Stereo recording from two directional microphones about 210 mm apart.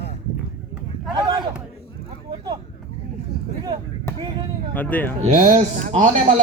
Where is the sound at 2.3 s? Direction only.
20° right (ahead or behind).